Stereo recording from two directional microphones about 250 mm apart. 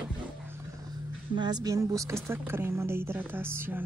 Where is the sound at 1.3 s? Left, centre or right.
Centre.